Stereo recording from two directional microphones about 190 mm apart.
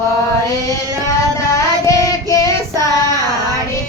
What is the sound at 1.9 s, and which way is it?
Child singing, 15° left (ahead or behind).